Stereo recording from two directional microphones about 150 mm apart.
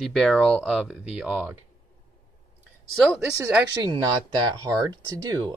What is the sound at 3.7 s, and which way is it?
Speech, 25° right (ahead or behind).